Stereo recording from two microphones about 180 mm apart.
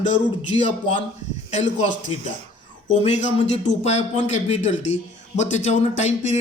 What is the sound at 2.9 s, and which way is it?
Speech, 40° left (ahead or behind).